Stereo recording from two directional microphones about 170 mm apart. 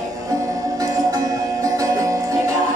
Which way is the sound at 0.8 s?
20° right (ahead or behind).